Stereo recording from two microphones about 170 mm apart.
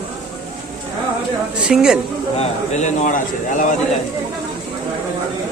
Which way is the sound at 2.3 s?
45° left (ahead or behind).